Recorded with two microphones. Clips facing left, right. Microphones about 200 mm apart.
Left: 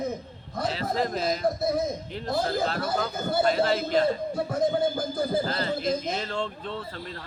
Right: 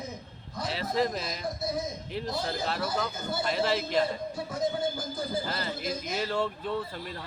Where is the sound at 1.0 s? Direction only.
Centre (ahead or behind).